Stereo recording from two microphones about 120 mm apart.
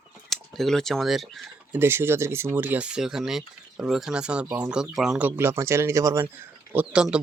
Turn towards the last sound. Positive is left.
turn(degrees=-10)  # may be behind; listen again after turning